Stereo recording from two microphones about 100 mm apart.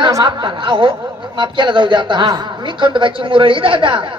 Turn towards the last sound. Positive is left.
turn(degrees=-55)  # may be behind; listen again after turning